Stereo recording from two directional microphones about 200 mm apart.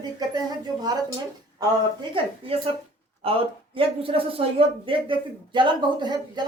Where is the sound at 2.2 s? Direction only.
30° right (ahead or behind).